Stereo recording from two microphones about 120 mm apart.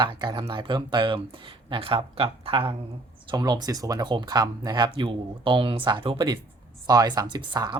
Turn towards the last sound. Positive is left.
turn(degrees=-35)  # may be behind; listen again after turning